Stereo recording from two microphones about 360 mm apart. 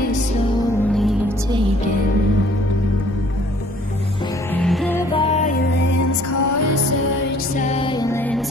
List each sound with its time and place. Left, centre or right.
4.6 s music: centre; by 5.9 s left
6.3 s music: left
7.5 s music: centre